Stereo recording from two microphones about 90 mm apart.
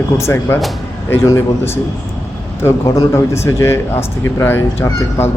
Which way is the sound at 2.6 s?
30° left (ahead or behind).